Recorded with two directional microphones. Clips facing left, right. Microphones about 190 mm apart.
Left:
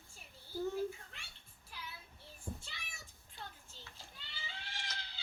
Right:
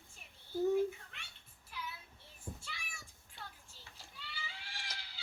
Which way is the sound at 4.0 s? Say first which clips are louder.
Right 5 dB; 25° left (ahead or behind).